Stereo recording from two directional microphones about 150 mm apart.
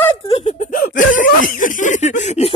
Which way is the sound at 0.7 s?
65° left (ahead or behind).